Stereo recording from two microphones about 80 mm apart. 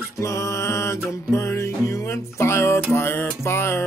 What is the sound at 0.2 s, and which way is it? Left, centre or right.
Music, left.